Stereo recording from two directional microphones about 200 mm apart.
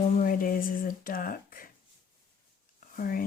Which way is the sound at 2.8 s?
45° left (ahead or behind).